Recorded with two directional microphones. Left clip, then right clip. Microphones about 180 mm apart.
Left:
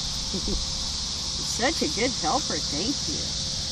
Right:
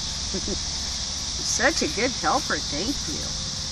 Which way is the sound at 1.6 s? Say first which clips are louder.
Right 3 dB; 35° left (ahead or behind).